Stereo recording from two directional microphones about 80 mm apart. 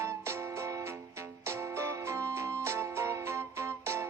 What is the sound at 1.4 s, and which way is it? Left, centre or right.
Music, right.